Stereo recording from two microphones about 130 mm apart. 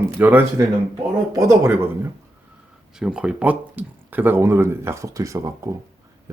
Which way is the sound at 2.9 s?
5° right (ahead or behind).